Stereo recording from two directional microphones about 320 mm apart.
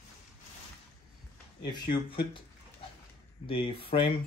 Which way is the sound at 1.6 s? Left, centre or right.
Centre.